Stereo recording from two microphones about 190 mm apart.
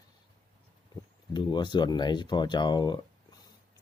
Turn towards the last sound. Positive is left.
turn(degrees=25)  # may be behind; listen again after turning